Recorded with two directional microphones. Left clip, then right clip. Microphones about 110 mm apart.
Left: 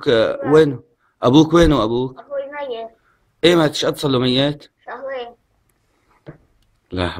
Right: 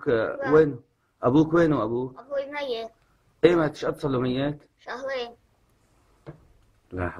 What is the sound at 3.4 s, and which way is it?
Mantra, 25° left (ahead or behind).